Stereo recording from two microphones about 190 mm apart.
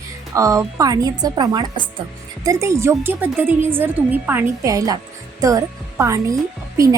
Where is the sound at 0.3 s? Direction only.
15° right (ahead or behind).